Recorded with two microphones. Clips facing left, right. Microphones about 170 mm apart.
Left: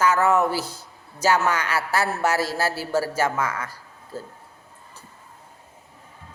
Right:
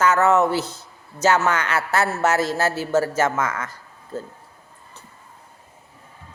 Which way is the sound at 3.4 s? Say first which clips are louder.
Right 2 dB; 30° left (ahead or behind).